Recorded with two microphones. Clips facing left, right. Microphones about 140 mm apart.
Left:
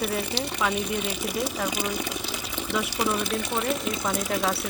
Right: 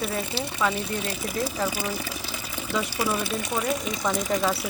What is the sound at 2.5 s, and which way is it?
Sewing machine, 10° right (ahead or behind).